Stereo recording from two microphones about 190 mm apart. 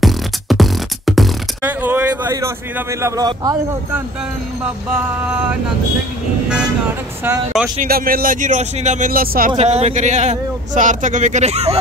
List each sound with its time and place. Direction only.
0.0 s music: centre (ahead or behind); by 4.0 s 20° right (ahead or behind)
7.2 s speech: 5° right (ahead or behind)
7.8 s speech: 50° right (ahead or behind)
9.6 s a man's voice: 35° right (ahead or behind)